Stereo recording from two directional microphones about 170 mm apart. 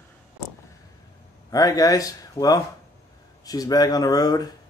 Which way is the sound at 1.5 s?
20° left (ahead or behind).